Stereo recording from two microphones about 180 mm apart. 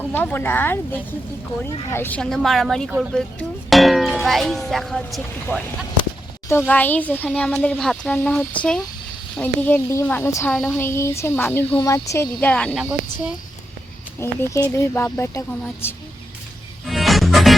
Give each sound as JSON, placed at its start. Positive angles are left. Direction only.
{"t": 0.0, "sound": "a child's voice", "side_deg": 10}
{"t": 12.8, "sound": "a woman's voice", "side_deg": -5}
{"t": 14.2, "sound": "a child's voice", "side_deg": 15}
{"t": 16.8, "sound": "music", "side_deg": 0}